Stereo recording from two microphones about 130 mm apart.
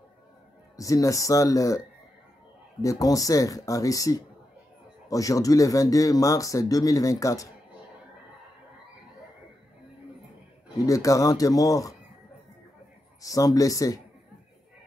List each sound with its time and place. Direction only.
0.7 s speech: 25° left (ahead or behind)
2.8 s speech: 25° left (ahead or behind)
10.9 s speech: 25° left (ahead or behind)
13.2 s speech: 25° left (ahead or behind)